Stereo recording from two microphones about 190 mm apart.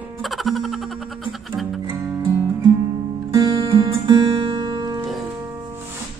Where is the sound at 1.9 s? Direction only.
15° right (ahead or behind).